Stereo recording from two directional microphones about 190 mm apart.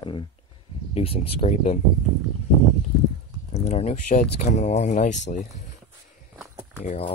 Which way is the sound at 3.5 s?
35° left (ahead or behind).